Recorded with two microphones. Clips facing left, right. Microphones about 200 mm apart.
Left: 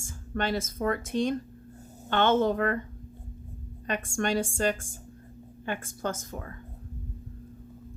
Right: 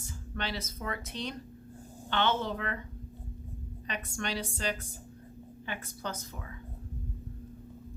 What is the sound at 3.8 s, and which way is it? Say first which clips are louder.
A woman's voice: left 8 dB; 50° left (ahead or behind).